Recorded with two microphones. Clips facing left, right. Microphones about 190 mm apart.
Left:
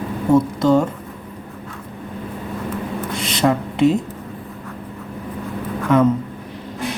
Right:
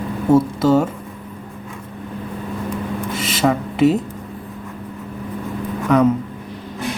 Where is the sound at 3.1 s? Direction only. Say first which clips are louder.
Even; 5° right (ahead or behind).